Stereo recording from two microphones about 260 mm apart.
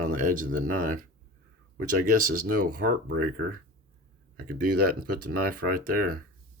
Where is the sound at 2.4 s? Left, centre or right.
Right.